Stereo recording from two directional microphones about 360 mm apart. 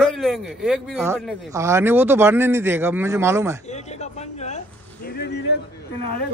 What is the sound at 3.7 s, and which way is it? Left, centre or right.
Speech, centre.